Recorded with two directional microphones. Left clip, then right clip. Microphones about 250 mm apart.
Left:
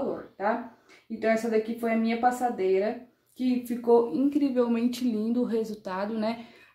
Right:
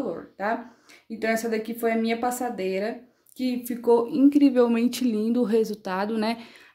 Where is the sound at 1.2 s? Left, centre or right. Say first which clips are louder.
Left 1 dB; right.